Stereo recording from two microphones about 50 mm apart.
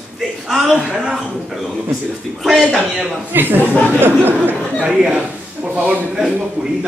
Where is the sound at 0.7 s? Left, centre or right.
Centre.